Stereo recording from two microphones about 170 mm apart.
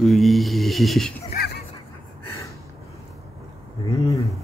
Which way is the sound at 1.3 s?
65° left (ahead or behind).